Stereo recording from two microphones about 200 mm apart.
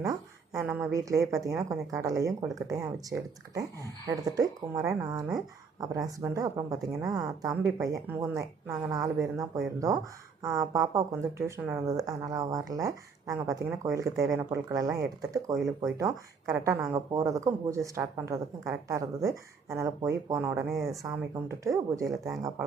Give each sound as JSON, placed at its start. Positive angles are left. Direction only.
{"t": 0.0, "sound": "speech", "side_deg": -15}